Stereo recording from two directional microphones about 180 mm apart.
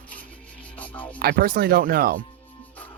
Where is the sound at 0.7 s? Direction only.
10° left (ahead or behind).